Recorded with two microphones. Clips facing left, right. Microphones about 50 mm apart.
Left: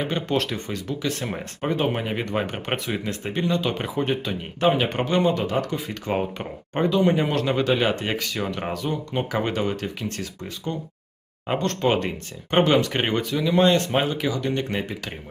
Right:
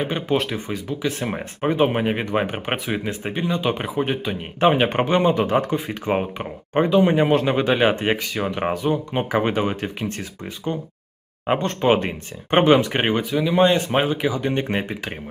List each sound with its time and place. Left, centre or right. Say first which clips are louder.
0.0 s speech: right 2 dB; centre
4.6 s speech: right 4 dB; right